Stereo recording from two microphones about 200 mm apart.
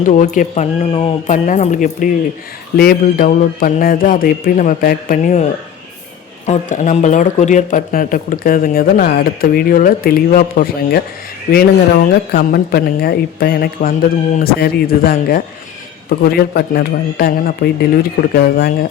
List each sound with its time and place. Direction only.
0.0 s speech: 40° left (ahead or behind)